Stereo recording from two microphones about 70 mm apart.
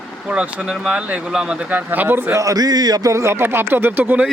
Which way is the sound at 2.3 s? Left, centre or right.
Right.